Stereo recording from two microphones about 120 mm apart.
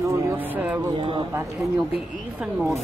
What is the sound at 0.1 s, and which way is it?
Vehicle, 20° right (ahead or behind).